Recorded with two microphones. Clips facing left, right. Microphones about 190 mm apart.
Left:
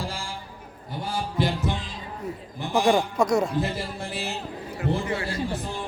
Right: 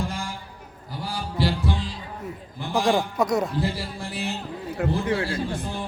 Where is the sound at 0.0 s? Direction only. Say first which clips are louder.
Right 3 dB; 30° left (ahead or behind).